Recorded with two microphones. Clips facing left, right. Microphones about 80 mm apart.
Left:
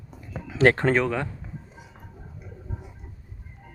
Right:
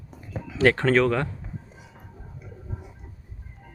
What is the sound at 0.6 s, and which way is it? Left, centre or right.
Speech, left.